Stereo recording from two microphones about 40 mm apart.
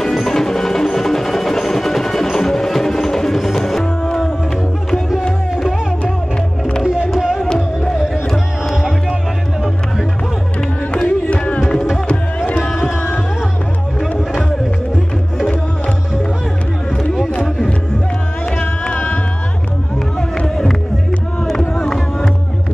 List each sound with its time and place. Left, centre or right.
0.0 s wood block: centre
7.2 s music: centre
11.1 s music: left
12.6 s music: centre
18.9 s music: left
20.4 s music: centre
21.5 s a sound: centre
21.8 s music: centre